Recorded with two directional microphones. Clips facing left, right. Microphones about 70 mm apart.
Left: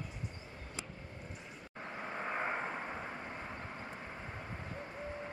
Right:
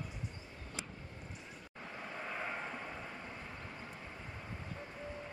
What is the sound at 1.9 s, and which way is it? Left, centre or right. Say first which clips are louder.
Vehicle: left 4 dB; left.